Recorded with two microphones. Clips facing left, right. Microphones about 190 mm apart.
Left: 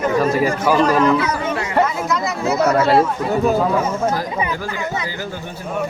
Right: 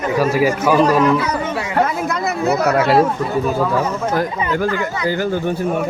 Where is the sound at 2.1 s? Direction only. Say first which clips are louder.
Right 2 dB; 60° right (ahead or behind).